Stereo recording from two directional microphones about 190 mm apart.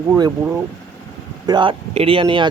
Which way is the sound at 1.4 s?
25° right (ahead or behind).